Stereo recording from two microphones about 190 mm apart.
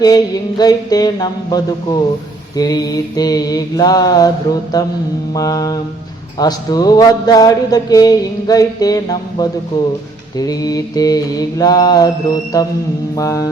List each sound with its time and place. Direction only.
0.0 s mantra: 20° left (ahead or behind)